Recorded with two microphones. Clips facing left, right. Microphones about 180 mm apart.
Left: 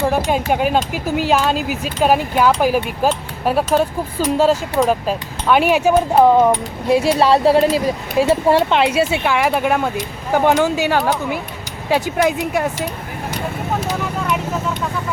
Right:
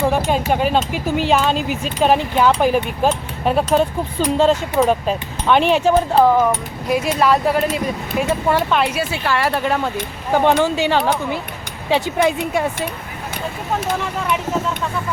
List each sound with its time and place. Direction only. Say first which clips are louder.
0.5 s speech: left 1 dB; 10° left (ahead or behind)
6.4 s speech: left 4 dB; 30° left (ahead or behind); by 12.6 s 5° left (ahead or behind)